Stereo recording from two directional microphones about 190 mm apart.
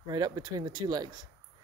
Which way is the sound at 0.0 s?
20° right (ahead or behind).